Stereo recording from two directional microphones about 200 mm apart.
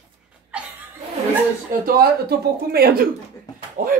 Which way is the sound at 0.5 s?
5° right (ahead or behind).